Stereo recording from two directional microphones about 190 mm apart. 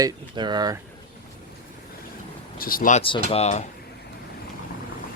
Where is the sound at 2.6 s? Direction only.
50° left (ahead or behind).